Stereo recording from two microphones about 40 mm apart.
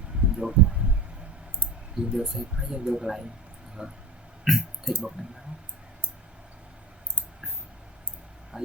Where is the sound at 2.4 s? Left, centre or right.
Right.